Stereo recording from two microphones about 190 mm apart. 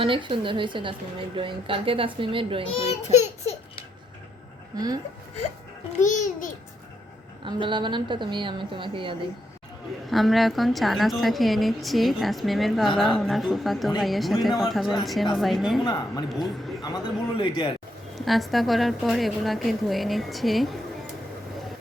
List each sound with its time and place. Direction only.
0.0 s a woman's voice: 25° right (ahead or behind)
2.7 s speech: 35° left (ahead or behind)
4.7 s a woman's voice: 20° right (ahead or behind)
6.0 s speech: 40° left (ahead or behind)
7.4 s a woman's voice: 25° right (ahead or behind)
10.1 s a woman's voice: centre (ahead or behind)
15.8 s speech: 20° left (ahead or behind)
18.1 s a woman's voice: centre (ahead or behind)